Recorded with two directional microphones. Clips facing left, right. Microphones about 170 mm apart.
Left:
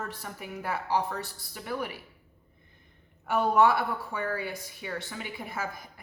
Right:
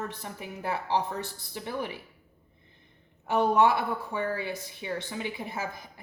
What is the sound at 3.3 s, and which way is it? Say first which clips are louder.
A woman's voice: even; 20° right (ahead or behind).